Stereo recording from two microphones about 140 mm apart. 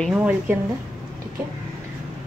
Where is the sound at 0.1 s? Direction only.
10° right (ahead or behind).